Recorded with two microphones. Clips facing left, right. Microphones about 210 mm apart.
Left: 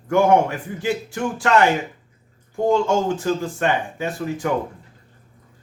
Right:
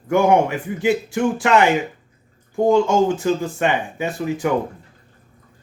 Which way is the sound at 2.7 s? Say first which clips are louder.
Right 3 dB; 15° right (ahead or behind).